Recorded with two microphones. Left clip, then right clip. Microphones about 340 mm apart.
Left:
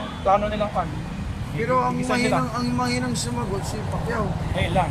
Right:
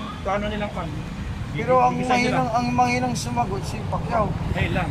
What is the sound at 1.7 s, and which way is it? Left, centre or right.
Speech, centre.